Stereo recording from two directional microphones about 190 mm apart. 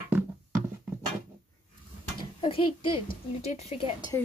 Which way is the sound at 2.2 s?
25° left (ahead or behind).